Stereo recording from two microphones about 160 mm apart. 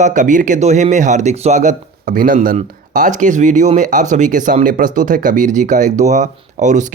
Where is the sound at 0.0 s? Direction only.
50° right (ahead or behind).